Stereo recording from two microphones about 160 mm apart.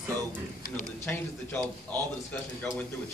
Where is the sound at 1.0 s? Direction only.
15° left (ahead or behind).